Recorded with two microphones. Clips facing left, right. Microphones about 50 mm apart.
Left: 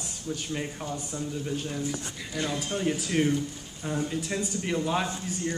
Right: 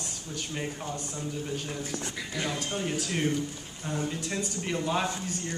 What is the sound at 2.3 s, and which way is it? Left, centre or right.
Speech, centre.